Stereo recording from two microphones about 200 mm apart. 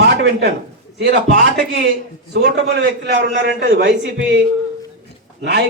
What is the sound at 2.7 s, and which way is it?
A man's voice, 60° right (ahead or behind).